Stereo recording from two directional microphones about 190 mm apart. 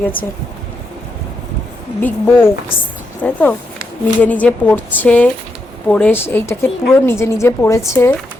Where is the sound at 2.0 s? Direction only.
10° left (ahead or behind).